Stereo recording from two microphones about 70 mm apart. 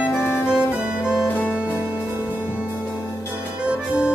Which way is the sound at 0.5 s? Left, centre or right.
Centre.